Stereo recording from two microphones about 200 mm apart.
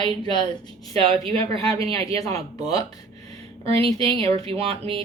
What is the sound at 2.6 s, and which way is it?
Speech, 20° left (ahead or behind).